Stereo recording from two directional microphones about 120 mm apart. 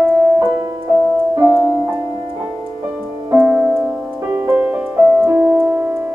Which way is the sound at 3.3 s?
15° right (ahead or behind).